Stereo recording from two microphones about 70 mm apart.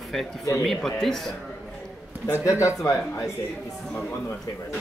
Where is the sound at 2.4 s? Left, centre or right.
Left.